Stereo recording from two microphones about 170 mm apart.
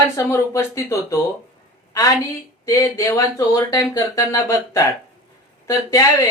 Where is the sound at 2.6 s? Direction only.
20° left (ahead or behind).